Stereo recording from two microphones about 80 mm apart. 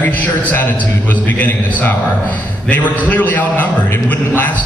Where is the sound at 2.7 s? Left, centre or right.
Left.